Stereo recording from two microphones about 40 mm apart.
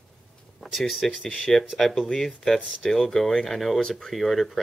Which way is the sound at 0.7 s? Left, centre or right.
Centre.